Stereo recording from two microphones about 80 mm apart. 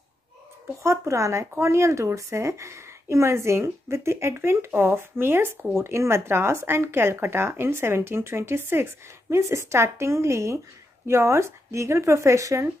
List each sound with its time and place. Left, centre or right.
0.8 s a woman's voice: right